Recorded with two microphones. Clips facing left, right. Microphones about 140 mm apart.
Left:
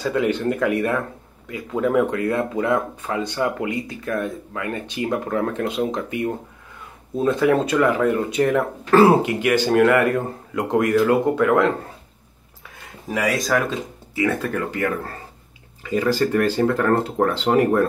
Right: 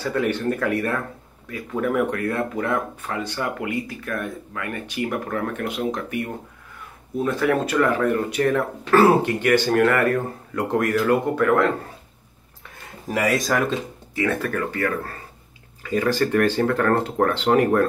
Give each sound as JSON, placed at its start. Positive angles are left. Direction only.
{"t": 0.0, "sound": "speech", "side_deg": 20}
{"t": 13.1, "sound": "speech", "side_deg": 0}
{"t": 14.4, "sound": "speech", "side_deg": 20}
{"t": 15.9, "sound": "speech", "side_deg": 10}